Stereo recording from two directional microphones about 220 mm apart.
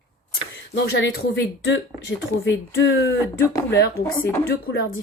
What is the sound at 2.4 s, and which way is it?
Speech, 55° left (ahead or behind).